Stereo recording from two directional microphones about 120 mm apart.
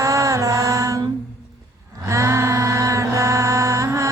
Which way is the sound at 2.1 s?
25° right (ahead or behind).